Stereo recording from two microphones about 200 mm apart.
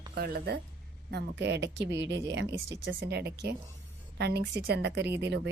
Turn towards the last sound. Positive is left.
turn(degrees=-55)  # may be behind; listen again after turning